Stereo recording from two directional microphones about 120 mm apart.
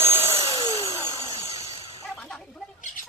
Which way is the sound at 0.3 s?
55° right (ahead or behind).